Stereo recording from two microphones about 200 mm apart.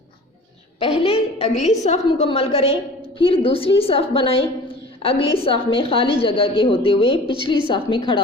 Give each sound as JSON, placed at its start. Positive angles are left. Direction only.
{"t": 0.8, "sound": "a woman's voice", "side_deg": 30}